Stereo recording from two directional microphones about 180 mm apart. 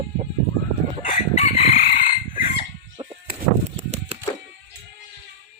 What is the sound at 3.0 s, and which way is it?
Music, 30° right (ahead or behind).